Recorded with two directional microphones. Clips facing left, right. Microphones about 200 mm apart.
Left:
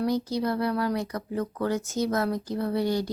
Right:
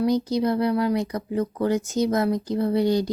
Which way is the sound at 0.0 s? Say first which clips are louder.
Right 5 dB; 15° right (ahead or behind).